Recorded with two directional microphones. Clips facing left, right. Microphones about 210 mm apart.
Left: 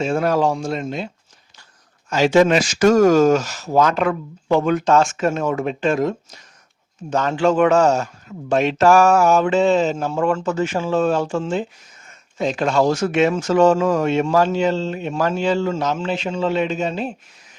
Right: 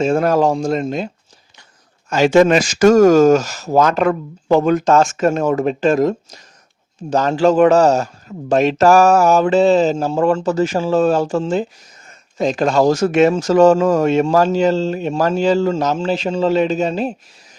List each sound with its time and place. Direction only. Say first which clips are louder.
0.0 s a man's voice: right 4 dB; 45° right (ahead or behind)